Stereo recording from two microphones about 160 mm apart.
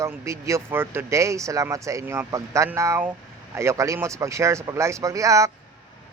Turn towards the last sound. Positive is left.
turn(degrees=-20)  # may be behind; listen again after turning